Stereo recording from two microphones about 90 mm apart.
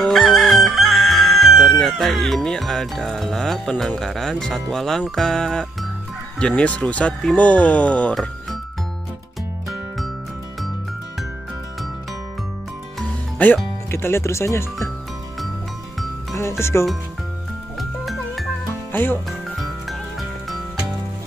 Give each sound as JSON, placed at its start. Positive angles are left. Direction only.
{"t": 0.0, "sound": "crowing", "side_deg": 0}
{"t": 6.4, "sound": "speech", "side_deg": 15}
{"t": 8.1, "sound": "music", "side_deg": 0}
{"t": 9.7, "sound": "music", "side_deg": 0}
{"t": 13.4, "sound": "speech", "side_deg": 15}
{"t": 13.8, "sound": "speech", "side_deg": 25}
{"t": 16.3, "sound": "speech", "side_deg": 30}
{"t": 17.7, "sound": "music", "side_deg": 0}
{"t": 18.9, "sound": "speech", "side_deg": 20}
{"t": 19.6, "sound": "music", "side_deg": 0}